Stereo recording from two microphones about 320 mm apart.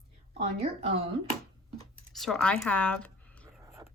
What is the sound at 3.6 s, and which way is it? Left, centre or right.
Whispering, centre.